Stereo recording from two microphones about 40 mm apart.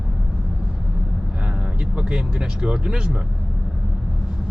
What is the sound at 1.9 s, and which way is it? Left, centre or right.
Speech, right.